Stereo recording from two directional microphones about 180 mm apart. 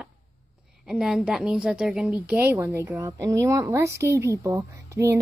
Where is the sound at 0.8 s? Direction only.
5° right (ahead or behind).